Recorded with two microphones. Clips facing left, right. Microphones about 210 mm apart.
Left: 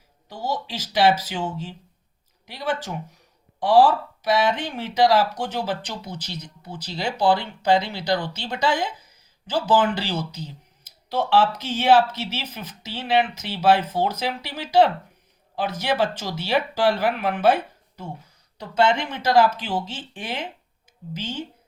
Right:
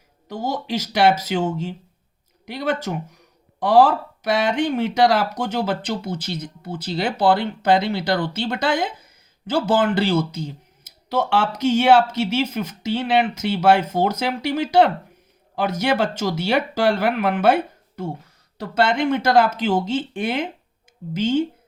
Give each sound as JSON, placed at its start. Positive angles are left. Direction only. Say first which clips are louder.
{"t": 0.4, "sound": "speech", "louder": "right 4 dB", "side_deg": -50}
{"t": 3.8, "sound": "speech", "louder": "right 2 dB", "side_deg": -50}